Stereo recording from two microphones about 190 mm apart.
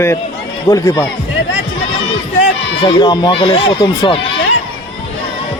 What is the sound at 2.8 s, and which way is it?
Speech, 20° left (ahead or behind).